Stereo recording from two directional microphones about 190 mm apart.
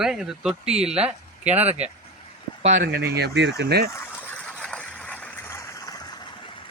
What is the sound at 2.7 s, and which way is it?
Speech, 50° right (ahead or behind).